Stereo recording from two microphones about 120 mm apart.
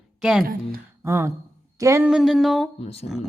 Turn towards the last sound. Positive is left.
turn(degrees=55)  # may be behind; listen again after turning